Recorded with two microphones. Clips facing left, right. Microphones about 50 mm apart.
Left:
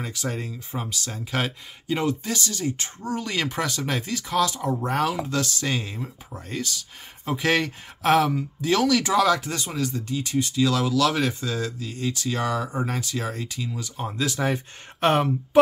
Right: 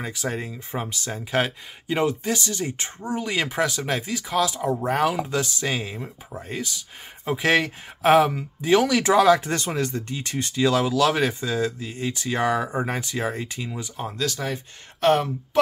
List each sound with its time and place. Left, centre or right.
0.0 s speech: centre
0.7 s speech: right
1.3 s speech: centre
9.0 s speech: right
9.5 s speech: right
14.1 s speech: centre
14.4 s speech: left